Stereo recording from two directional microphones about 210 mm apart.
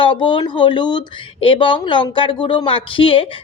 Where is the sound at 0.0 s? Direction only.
25° left (ahead or behind).